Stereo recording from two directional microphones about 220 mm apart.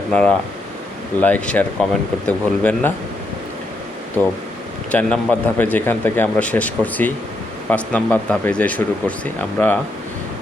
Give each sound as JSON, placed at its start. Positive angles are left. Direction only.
{"t": 0.1, "sound": "speech", "side_deg": 5}
{"t": 4.9, "sound": "speech", "side_deg": 5}